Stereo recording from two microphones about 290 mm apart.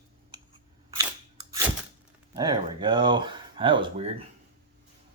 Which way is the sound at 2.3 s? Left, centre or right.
Centre.